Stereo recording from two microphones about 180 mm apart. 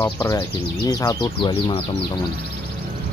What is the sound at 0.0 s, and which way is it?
Speech, 15° left (ahead or behind).